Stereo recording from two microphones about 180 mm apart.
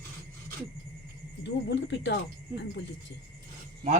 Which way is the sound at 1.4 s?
80° left.